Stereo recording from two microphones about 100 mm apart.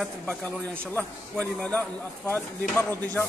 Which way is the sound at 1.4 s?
15° left (ahead or behind).